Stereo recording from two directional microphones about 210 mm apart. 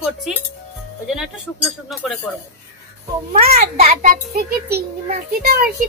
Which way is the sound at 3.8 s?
35° right (ahead or behind).